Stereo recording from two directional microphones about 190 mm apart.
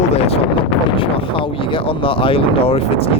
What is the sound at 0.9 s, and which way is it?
Speech, 25° left (ahead or behind).